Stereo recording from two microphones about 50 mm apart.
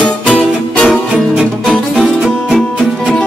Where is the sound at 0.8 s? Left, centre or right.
Centre.